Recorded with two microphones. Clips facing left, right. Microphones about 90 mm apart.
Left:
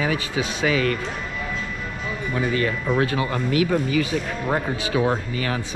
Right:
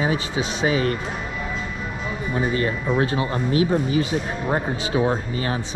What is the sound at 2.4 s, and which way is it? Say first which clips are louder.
Speech: even; 30° right (ahead or behind).